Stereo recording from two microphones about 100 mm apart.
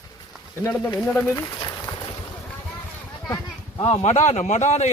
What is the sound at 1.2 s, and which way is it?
Speech, 20° left (ahead or behind).